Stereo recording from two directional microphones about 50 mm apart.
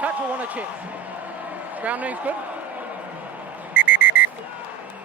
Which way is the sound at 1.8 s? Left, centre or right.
Right.